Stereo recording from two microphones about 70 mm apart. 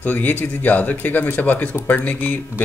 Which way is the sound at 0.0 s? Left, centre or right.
Left.